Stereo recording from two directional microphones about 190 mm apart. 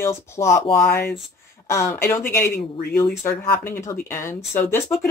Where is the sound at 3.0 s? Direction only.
15° left (ahead or behind).